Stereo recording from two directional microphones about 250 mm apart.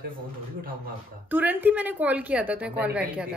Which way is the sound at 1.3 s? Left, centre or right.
Centre.